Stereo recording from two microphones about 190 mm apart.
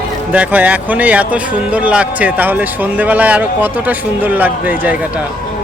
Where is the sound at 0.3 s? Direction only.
10° right (ahead or behind).